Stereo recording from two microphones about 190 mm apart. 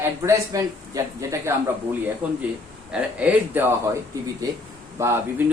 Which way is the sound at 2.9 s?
5° right (ahead or behind).